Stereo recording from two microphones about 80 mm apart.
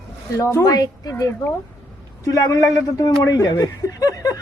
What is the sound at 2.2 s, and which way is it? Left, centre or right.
Speech, left.